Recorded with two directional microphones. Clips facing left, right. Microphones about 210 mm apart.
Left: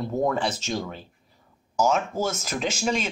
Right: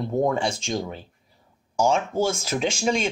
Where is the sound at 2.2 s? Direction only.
10° right (ahead or behind).